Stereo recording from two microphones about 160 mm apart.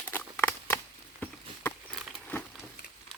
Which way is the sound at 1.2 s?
10° left (ahead or behind).